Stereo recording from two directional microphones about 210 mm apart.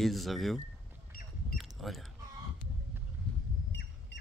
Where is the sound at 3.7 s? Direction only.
55° left (ahead or behind).